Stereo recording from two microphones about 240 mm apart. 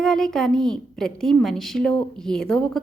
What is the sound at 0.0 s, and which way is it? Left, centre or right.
A woman's voice, centre.